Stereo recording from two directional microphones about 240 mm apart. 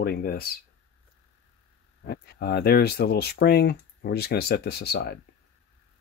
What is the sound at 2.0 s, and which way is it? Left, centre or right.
Speech, left.